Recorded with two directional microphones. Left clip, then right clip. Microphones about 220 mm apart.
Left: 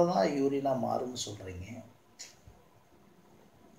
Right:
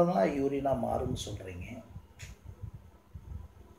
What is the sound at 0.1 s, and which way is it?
Speech, centre (ahead or behind).